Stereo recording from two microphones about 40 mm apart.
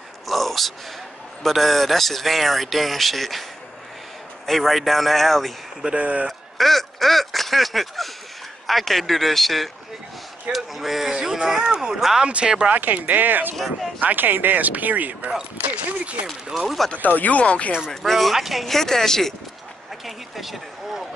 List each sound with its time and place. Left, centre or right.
0.3 s a sound: centre
1.4 s speech: centre
4.5 s speech: centre
5.9 s speech: right
6.2 s speech: centre
12.3 s speech: right
12.6 s speech: right
15.6 s a sound: right
16.5 s speech: centre
17.0 s speech: left
18.0 s speech: centre
20.1 s speech: centre